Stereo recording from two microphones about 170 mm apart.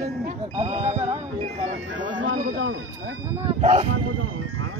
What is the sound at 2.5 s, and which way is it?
Speech, 90° right.